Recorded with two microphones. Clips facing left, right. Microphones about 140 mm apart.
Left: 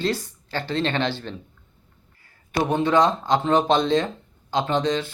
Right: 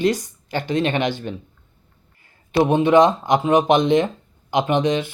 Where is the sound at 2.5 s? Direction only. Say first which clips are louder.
Right 5 dB; 20° right (ahead or behind).